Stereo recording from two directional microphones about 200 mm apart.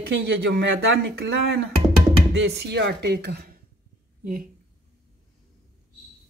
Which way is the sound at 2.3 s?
60° right (ahead or behind).